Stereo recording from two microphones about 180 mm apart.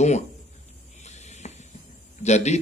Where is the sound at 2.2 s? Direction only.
40° left (ahead or behind).